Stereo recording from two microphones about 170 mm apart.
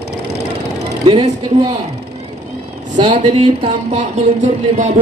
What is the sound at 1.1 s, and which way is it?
Speech, 35° right (ahead or behind).